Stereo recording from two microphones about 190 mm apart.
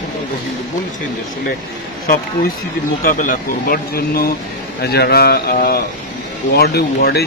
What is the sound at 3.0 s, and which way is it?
Speech, 45° left (ahead or behind).